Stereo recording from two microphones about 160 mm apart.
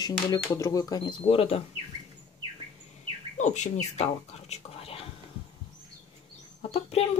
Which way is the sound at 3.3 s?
50° left (ahead or behind).